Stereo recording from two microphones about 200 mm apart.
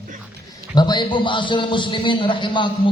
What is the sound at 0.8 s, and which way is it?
A man's voice, 20° left (ahead or behind).